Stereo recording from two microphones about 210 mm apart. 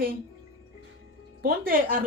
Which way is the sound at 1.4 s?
45° right (ahead or behind).